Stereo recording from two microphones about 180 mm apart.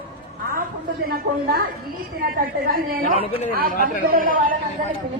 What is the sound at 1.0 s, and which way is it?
A woman's voice, 55° right (ahead or behind).